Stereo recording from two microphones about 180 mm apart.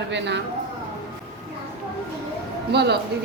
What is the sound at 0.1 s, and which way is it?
Speech, 75° right (ahead or behind).